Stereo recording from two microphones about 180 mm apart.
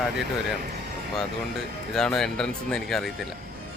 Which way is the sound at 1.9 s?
Centre (ahead or behind).